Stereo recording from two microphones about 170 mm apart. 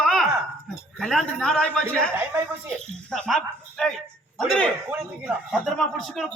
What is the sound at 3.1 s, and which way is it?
A man's voice, centre (ahead or behind).